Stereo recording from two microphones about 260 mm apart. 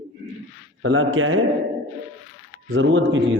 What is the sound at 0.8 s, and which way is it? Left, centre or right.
Speech, right.